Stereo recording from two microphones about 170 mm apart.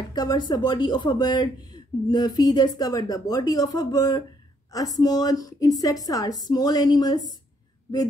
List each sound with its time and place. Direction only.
0.1 s a woman's voice: 25° left (ahead or behind)